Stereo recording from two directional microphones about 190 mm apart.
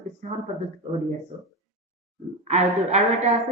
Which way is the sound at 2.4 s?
35° right (ahead or behind).